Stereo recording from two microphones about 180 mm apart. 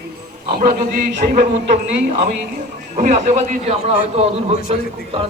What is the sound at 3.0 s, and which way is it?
A man's voice, 40° right (ahead or behind).